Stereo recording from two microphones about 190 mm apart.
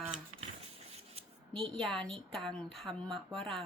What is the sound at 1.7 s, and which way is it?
A woman's voice, centre (ahead or behind).